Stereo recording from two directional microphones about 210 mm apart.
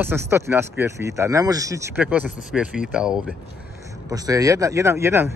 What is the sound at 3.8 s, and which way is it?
Speech, 15° right (ahead or behind).